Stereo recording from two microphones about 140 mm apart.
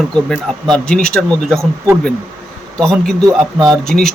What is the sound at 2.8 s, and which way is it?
Speech, 5° left (ahead or behind).